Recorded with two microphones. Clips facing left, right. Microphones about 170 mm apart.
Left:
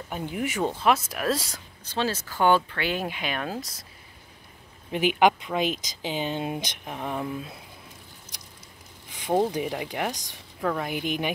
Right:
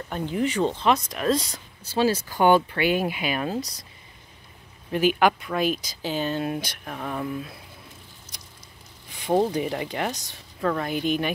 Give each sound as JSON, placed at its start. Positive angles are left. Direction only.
{"t": 0.1, "sound": "speech", "side_deg": 10}
{"t": 1.9, "sound": "speech", "side_deg": -10}
{"t": 4.9, "sound": "speech", "side_deg": 20}
{"t": 9.1, "sound": "a sound", "side_deg": 15}
{"t": 9.5, "sound": "speech", "side_deg": 10}